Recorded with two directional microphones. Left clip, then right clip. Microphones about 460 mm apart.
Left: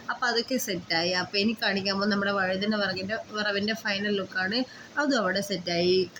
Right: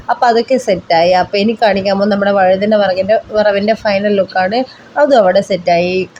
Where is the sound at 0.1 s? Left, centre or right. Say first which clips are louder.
Right 17 dB; left.